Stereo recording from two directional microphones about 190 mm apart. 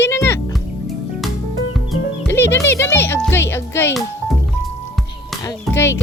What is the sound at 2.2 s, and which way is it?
Speech, 10° left (ahead or behind).